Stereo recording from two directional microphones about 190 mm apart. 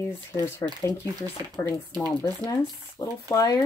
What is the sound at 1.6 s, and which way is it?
Speech, 10° left (ahead or behind).